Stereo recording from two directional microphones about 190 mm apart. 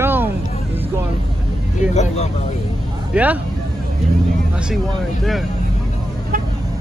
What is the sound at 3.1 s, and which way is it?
Speech, 10° right (ahead or behind).